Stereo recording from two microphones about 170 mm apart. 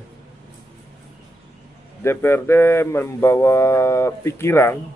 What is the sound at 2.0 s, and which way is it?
Speech, 15° left (ahead or behind).